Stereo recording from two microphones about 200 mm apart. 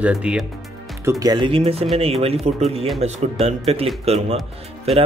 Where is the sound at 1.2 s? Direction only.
20° right (ahead or behind).